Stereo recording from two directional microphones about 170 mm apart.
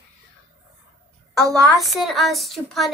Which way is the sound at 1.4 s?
20° right (ahead or behind).